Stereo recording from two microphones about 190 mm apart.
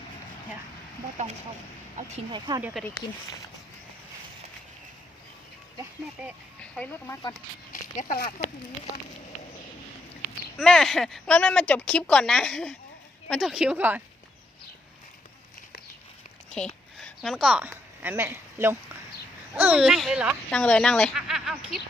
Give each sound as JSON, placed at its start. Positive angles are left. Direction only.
{"t": 2.0, "sound": "speech", "side_deg": -40}
{"t": 2.6, "sound": "speech", "side_deg": -10}
{"t": 6.6, "sound": "speech", "side_deg": 5}
{"t": 7.7, "sound": "a sound", "side_deg": 40}
{"t": 10.6, "sound": "a woman's voice", "side_deg": 0}
{"t": 16.6, "sound": "a sound", "side_deg": 5}
{"t": 19.5, "sound": "a woman's voice", "side_deg": -10}